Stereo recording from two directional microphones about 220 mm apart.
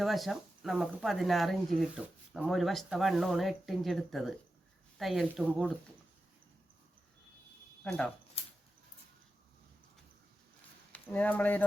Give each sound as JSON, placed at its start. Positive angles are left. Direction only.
{"t": 0.0, "sound": "speech", "side_deg": 0}
{"t": 7.9, "sound": "speech", "side_deg": 5}
{"t": 8.4, "sound": "a sound", "side_deg": 25}
{"t": 10.9, "sound": "speech", "side_deg": 5}